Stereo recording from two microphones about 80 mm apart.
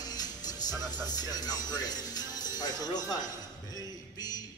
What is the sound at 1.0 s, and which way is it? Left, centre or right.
Speech, left.